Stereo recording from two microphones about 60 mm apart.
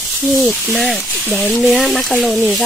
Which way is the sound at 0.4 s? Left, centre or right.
Centre.